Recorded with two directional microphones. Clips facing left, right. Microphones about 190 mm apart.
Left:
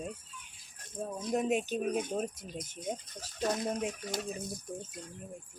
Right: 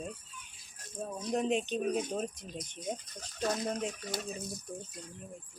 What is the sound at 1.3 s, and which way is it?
Speech, 5° left (ahead or behind).